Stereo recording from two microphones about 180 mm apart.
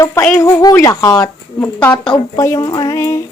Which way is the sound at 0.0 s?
15° left (ahead or behind).